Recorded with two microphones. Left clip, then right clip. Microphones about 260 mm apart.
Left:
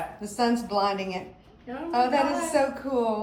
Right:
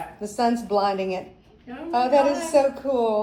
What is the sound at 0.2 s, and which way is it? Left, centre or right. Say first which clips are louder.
Speech: right 6 dB; right.